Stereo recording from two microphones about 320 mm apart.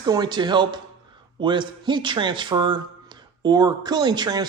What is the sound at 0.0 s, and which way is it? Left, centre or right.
A man's voice, centre.